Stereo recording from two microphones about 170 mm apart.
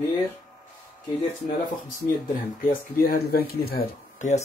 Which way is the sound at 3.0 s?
65° left (ahead or behind).